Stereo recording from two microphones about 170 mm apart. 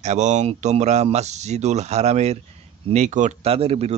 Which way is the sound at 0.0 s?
40° right (ahead or behind).